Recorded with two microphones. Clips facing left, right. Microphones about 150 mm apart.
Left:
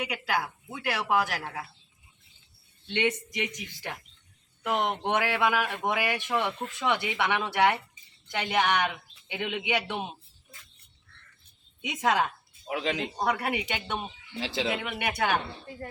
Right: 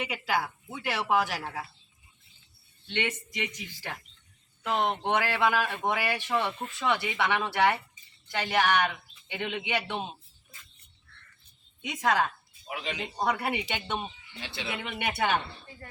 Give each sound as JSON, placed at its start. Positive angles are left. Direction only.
{"t": 0.0, "sound": "speech", "side_deg": 0}
{"t": 2.9, "sound": "a man's voice", "side_deg": 15}
{"t": 11.9, "sound": "a man's voice", "side_deg": 20}
{"t": 12.6, "sound": "speech", "side_deg": 90}
{"t": 13.0, "sound": "speech", "side_deg": 0}
{"t": 14.4, "sound": "speech", "side_deg": 90}
{"t": 14.8, "sound": "speech", "side_deg": 5}